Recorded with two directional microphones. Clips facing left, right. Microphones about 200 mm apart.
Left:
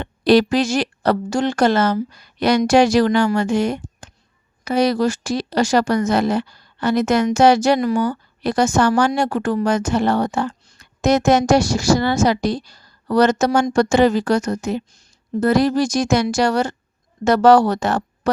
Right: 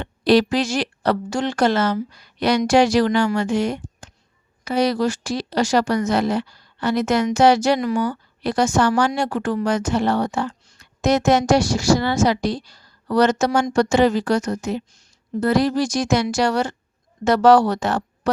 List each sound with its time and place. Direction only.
0.0 s speech: 45° left (ahead or behind)